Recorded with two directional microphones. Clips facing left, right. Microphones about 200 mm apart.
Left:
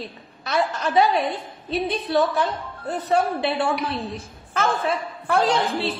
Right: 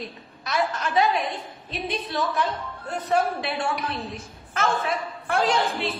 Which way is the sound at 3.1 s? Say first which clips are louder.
Left 3 dB; 30° left (ahead or behind).